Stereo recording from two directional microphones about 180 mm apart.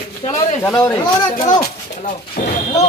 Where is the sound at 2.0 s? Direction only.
45° left (ahead or behind).